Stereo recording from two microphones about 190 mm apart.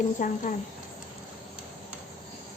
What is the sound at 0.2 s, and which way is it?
Speech, 40° left (ahead or behind).